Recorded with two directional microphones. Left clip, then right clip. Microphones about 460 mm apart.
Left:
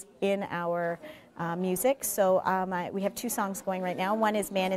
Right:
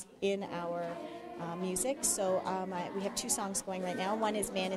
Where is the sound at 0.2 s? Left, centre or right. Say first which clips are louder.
Left 5 dB; left.